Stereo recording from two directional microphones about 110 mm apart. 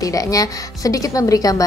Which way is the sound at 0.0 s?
35° left (ahead or behind).